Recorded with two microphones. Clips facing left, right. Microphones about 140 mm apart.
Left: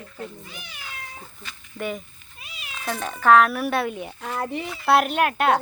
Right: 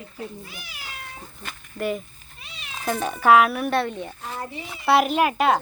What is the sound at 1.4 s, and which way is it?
Cat, 50° right (ahead or behind).